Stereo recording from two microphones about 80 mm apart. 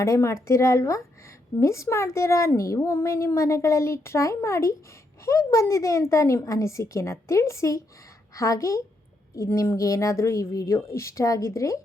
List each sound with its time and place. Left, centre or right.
0.0 s a woman's voice: left